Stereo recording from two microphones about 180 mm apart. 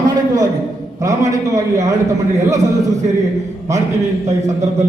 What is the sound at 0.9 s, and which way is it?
Speech, 20° right (ahead or behind).